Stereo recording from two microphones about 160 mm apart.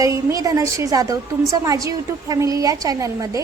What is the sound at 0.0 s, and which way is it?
A woman's voice, 20° right (ahead or behind).